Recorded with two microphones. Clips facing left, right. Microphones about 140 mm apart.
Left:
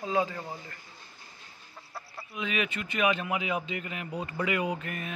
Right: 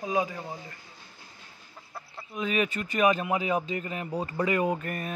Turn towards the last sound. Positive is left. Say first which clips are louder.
# right 4 dB
turn(degrees=-40)  # may be behind; listen again after turning